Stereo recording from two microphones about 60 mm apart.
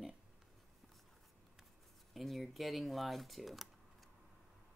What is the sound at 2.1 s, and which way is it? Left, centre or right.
Speech, centre.